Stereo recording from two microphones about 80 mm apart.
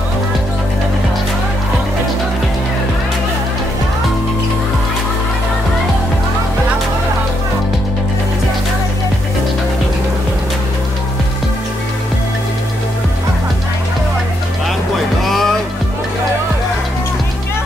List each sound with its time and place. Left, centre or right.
15.2 s music: centre